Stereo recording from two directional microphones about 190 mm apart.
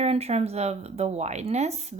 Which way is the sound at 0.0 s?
35° right (ahead or behind).